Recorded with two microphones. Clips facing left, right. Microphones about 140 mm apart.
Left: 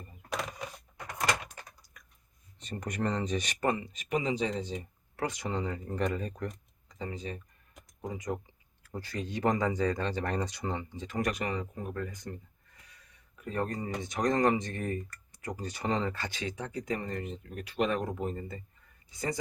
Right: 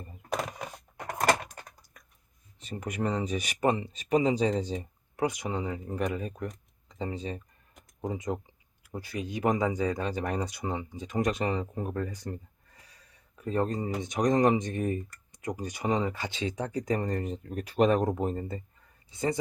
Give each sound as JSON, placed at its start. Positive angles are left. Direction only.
{"t": 0.9, "sound": "a sound", "side_deg": -55}
{"t": 2.6, "sound": "speech", "side_deg": -5}
{"t": 3.7, "sound": "speech", "side_deg": -30}
{"t": 5.1, "sound": "speech", "side_deg": -15}
{"t": 6.8, "sound": "speech", "side_deg": -30}
{"t": 8.8, "sound": "speech", "side_deg": -10}
{"t": 16.4, "sound": "speech", "side_deg": -35}
{"t": 19.1, "sound": "speech", "side_deg": -25}